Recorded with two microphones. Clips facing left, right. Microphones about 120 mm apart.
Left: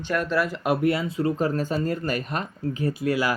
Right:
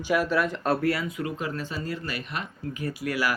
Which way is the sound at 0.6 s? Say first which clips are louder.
Left 3 dB; 15° left (ahead or behind).